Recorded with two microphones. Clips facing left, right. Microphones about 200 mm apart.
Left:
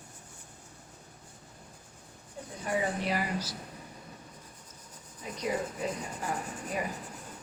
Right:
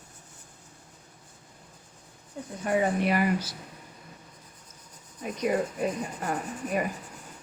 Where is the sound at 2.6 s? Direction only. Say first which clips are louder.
Right 6 dB; 55° right (ahead or behind).